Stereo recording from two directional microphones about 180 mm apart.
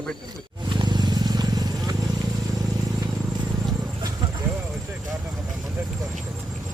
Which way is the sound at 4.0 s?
20° right (ahead or behind).